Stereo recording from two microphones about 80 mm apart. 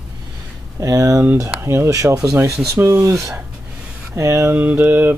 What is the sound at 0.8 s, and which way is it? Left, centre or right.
Speech, right.